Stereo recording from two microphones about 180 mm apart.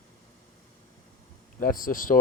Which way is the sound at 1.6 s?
50° left (ahead or behind).